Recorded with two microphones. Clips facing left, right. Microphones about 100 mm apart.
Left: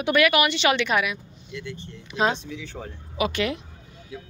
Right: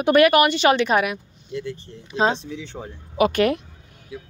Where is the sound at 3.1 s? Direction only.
45° right (ahead or behind).